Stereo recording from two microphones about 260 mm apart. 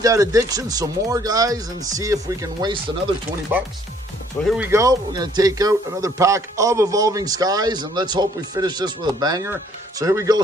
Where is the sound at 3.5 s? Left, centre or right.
Centre.